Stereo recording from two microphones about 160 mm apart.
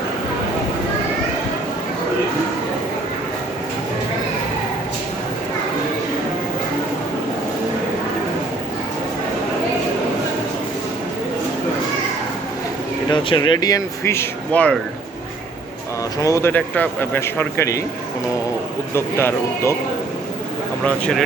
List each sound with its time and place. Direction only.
13.1 s speech: 30° left (ahead or behind); by 14.8 s 10° left (ahead or behind)
16.2 s speech: 15° left (ahead or behind)
18.9 s speech: 15° left (ahead or behind)
20.8 s speech: 5° left (ahead or behind)